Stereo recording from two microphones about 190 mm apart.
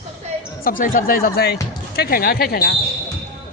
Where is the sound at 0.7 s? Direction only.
45° left (ahead or behind).